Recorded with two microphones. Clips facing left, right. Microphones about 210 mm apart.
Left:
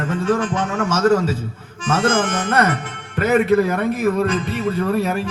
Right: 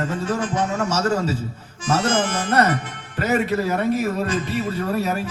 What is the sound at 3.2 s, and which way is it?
A man's voice, 55° left (ahead or behind).